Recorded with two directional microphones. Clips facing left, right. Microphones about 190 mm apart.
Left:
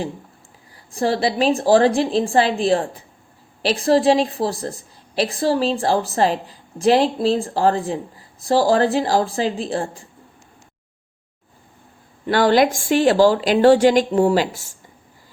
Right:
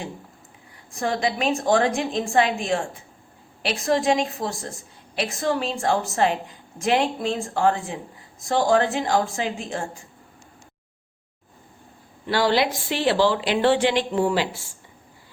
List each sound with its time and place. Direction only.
0.9 s a woman's voice: 35° left (ahead or behind)
12.3 s speech: 50° left (ahead or behind)